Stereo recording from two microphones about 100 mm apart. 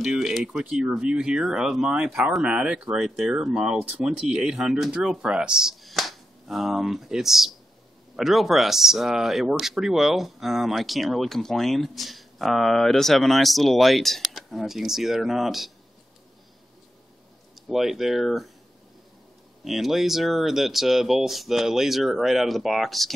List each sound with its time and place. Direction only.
0.0 s speech: centre (ahead or behind)
17.6 s speech: centre (ahead or behind)
19.6 s speech: centre (ahead or behind)